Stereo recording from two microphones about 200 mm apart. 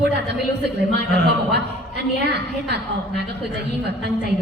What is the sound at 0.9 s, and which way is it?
Speech, 55° right (ahead or behind).